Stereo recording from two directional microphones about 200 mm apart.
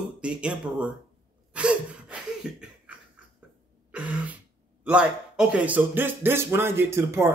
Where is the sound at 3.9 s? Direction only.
5° right (ahead or behind).